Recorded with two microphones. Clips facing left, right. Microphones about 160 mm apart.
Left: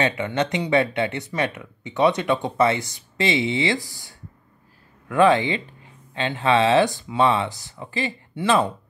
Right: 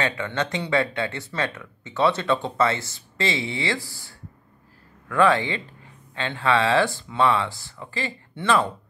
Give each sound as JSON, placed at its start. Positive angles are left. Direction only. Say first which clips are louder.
{"t": 0.0, "sound": "speech", "louder": "left 3 dB", "side_deg": 20}